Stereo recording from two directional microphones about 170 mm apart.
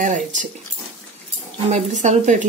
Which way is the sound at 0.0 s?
50° right (ahead or behind).